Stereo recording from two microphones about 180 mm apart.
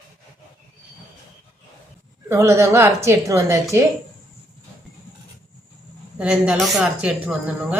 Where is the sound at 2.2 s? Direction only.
15° right (ahead or behind).